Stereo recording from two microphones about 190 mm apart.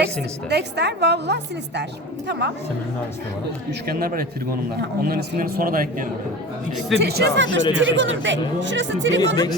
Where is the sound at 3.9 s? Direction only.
50° right (ahead or behind).